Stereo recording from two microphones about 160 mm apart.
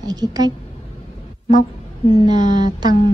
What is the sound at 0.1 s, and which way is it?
Speech, 25° right (ahead or behind).